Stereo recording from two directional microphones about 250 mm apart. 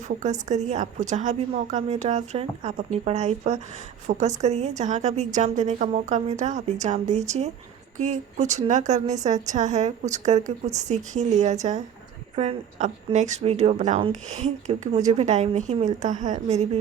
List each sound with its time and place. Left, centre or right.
0.4 s speech: right